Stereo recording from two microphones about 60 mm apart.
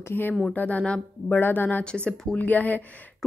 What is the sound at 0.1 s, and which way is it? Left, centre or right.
Speech, left.